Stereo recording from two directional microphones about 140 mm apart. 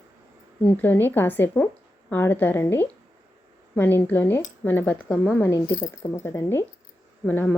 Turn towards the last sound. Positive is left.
turn(degrees=10)  # may be behind; listen again after turning